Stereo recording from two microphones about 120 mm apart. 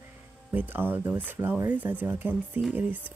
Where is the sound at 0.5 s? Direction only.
15° right (ahead or behind).